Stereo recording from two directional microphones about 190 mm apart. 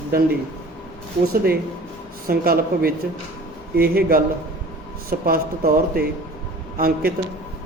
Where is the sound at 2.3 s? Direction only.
50° right (ahead or behind).